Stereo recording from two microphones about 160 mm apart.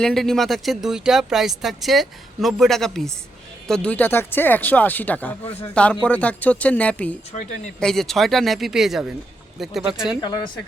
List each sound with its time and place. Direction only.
0.0 s speech: 5° left (ahead or behind)
10.2 s speech: 30° left (ahead or behind)